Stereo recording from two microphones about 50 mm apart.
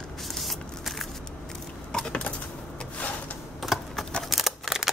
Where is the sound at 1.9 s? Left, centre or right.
Centre.